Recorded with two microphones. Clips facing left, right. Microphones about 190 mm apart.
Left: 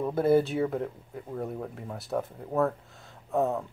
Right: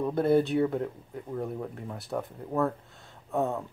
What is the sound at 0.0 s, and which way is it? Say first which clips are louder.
Speech: left 1 dB; 5° left (ahead or behind).